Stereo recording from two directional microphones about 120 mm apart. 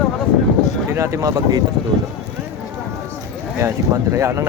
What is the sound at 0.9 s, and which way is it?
Speech, 25° right (ahead or behind).